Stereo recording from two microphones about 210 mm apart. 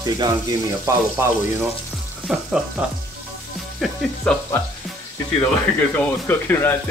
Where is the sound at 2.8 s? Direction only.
5° right (ahead or behind).